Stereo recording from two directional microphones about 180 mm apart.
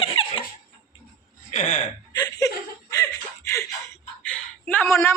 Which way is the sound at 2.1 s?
20° left (ahead or behind).